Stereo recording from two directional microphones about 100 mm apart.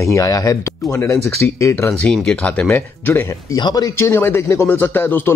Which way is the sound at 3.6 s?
45° left (ahead or behind).